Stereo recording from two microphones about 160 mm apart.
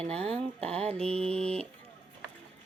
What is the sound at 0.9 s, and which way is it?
Speech, 40° right (ahead or behind).